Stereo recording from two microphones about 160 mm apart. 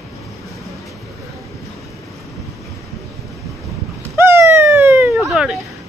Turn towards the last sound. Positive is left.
turn(degrees=-5)  # may be behind; listen again after turning